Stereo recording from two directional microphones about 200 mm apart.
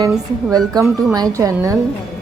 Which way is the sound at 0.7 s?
20° right (ahead or behind).